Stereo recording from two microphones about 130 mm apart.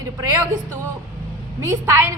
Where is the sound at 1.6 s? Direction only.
20° right (ahead or behind).